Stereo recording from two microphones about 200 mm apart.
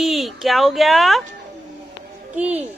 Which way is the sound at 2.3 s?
5° right (ahead or behind).